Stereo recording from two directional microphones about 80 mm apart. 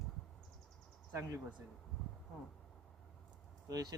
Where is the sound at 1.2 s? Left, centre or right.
Right.